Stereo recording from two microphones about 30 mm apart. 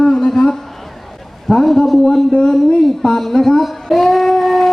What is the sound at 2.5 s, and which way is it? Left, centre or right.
Speech, centre.